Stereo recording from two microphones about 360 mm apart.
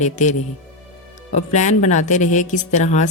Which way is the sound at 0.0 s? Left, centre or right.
Centre.